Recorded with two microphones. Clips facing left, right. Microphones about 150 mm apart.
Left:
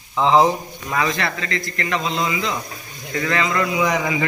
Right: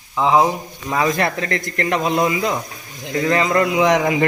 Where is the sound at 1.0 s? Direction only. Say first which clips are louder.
Right 6 dB; 50° right (ahead or behind).